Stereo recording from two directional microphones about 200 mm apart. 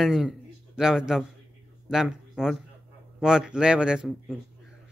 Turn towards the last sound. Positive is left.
turn(degrees=-5)  # may be behind; listen again after turning